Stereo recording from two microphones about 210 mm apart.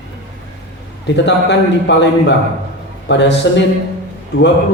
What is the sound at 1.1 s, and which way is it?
A man's voice, 55° left (ahead or behind).